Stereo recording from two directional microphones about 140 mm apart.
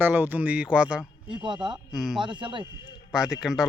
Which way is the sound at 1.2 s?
35° right (ahead or behind).